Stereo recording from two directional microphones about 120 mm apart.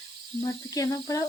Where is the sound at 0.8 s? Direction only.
30° left (ahead or behind).